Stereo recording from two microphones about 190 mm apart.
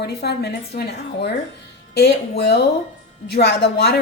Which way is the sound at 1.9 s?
60° left (ahead or behind).